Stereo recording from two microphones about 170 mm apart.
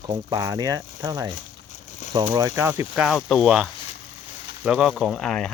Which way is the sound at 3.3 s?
Centre (ahead or behind).